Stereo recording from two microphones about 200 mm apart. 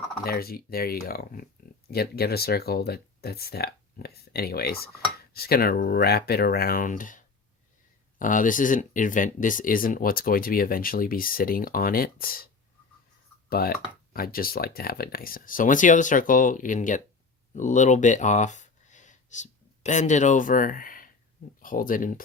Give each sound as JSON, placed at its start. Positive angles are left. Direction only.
{"t": 0.3, "sound": "speech", "side_deg": 50}
{"t": 13.5, "sound": "speech", "side_deg": 50}